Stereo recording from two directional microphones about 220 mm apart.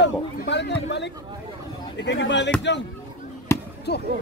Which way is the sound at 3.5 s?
10° left (ahead or behind).